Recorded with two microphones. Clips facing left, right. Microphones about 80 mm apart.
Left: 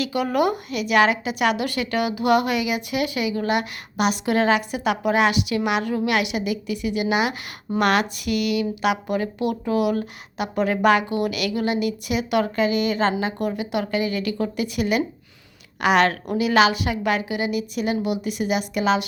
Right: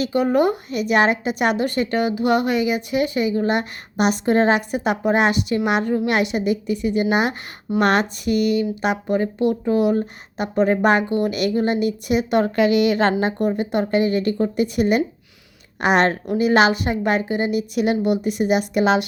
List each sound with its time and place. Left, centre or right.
0.0 s a woman's voice: right
12.5 s a woman's voice: right
13.1 s a woman's voice: right